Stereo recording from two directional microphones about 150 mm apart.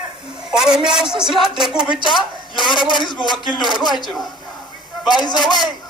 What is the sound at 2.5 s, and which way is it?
Speech, 30° left (ahead or behind).